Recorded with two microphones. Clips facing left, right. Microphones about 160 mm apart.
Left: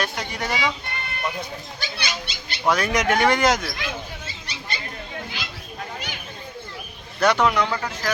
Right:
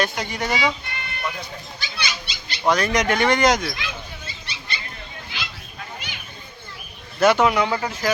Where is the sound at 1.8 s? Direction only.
55° left (ahead or behind).